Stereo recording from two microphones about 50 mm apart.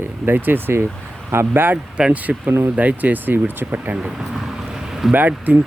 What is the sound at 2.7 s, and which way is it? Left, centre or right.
Speech, right.